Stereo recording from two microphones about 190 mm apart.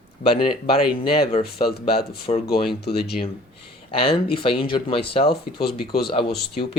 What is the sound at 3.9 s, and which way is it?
Speech, 30° left (ahead or behind).